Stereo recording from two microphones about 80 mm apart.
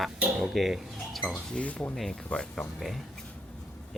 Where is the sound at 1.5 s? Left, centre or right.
Centre.